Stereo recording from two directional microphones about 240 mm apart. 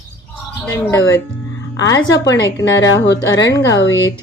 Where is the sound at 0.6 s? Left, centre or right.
Centre.